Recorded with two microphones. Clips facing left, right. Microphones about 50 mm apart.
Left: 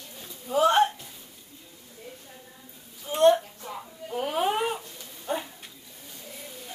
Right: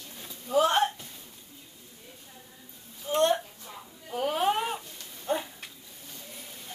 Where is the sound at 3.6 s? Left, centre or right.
Left.